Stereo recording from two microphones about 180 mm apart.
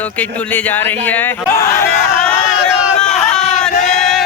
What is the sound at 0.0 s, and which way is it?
Speech, 10° left (ahead or behind).